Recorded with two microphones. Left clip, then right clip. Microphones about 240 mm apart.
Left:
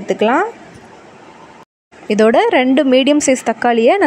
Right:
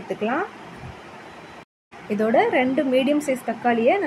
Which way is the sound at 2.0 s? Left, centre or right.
Left.